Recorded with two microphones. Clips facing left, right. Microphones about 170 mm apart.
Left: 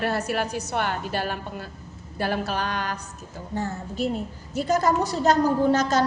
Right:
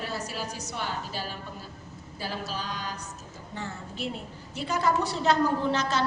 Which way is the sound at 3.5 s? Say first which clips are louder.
Left 8 dB; 40° left (ahead or behind).